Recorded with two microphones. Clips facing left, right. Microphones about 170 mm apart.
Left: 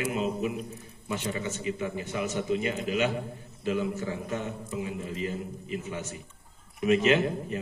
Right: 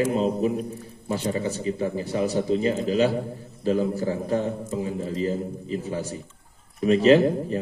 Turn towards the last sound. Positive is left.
turn(degrees=-35)  # may be behind; listen again after turning